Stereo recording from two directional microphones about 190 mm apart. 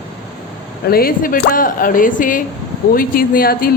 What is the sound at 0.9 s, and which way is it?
A woman's voice, 50° left (ahead or behind).